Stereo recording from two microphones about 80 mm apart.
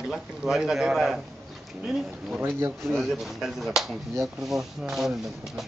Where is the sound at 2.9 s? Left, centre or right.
Centre.